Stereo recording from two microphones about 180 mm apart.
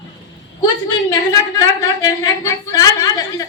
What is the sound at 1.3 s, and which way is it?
A woman's voice, 20° left (ahead or behind).